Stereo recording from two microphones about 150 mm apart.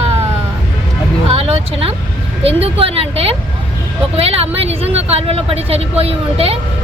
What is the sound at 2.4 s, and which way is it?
Speech, 40° right (ahead or behind).